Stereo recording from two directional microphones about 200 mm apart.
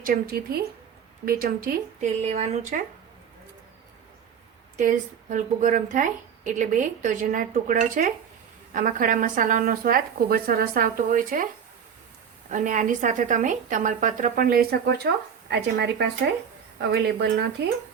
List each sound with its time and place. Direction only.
0.0 s speech: 50° right (ahead or behind)
4.8 s a woman's voice: 40° right (ahead or behind)
12.5 s a woman's voice: 40° right (ahead or behind)